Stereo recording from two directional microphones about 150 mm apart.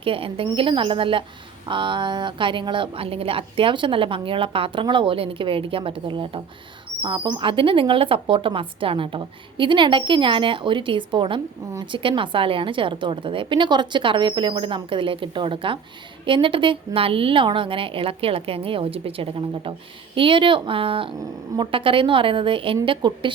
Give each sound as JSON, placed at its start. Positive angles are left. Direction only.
{"t": 0.0, "sound": "a woman's voice", "side_deg": -35}